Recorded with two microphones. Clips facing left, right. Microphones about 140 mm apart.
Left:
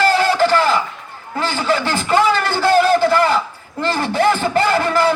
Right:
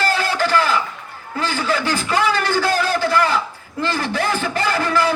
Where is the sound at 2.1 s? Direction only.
25° left (ahead or behind).